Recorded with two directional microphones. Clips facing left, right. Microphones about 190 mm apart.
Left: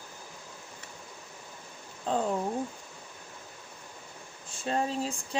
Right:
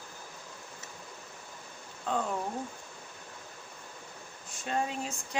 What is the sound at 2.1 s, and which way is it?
Speech, 30° left (ahead or behind).